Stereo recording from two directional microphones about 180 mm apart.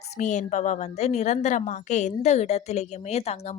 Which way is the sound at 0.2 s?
40° left (ahead or behind).